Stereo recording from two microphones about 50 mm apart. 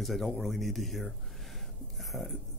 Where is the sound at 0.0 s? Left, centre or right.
Centre.